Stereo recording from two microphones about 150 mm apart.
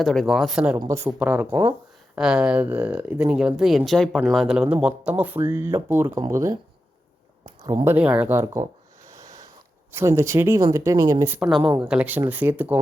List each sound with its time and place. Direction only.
0.0 s speech: centre (ahead or behind)
0.8 s speech: 20° right (ahead or behind)
7.4 s a sound: 20° right (ahead or behind)
7.9 s speech: 10° right (ahead or behind)
9.0 s a sound: 20° right (ahead or behind)
9.9 s speech: 15° right (ahead or behind)
11.3 s speech: centre (ahead or behind)